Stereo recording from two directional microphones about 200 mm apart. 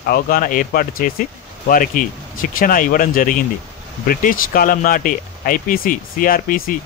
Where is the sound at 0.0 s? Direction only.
50° left (ahead or behind).